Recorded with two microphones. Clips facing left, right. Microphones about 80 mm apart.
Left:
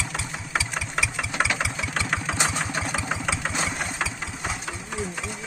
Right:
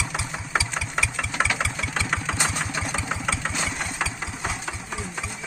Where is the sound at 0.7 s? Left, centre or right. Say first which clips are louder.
Right 1 dB; centre.